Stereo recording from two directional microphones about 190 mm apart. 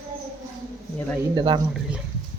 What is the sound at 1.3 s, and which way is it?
Speech, 25° right (ahead or behind).